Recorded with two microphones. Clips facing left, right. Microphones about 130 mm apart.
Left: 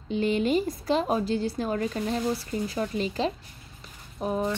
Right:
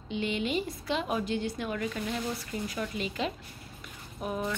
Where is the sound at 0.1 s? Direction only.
40° left (ahead or behind).